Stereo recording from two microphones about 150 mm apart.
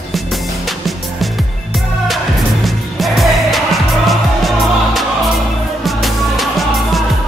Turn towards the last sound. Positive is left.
turn(degrees=0)  # may be behind; listen again after turning